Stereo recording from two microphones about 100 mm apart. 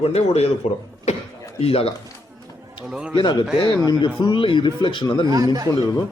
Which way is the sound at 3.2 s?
45° left (ahead or behind).